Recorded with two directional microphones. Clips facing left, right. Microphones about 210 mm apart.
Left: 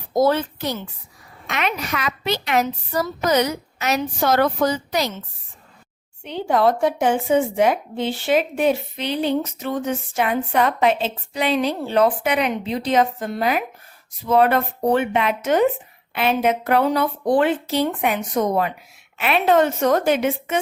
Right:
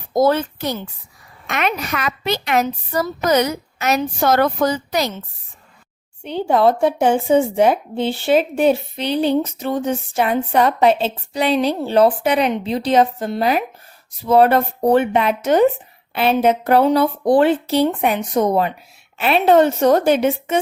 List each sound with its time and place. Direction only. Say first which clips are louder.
0.1 s a woman's voice: right 2 dB; 45° right (ahead or behind)
6.2 s speech: right 3 dB; 30° right (ahead or behind)